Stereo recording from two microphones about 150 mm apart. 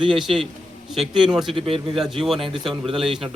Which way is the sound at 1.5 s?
35° right (ahead or behind).